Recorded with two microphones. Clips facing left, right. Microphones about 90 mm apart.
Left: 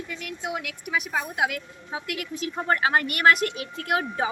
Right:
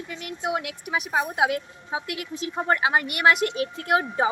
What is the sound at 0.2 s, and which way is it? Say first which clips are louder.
A woman's voice: right 6 dB; 35° right (ahead or behind).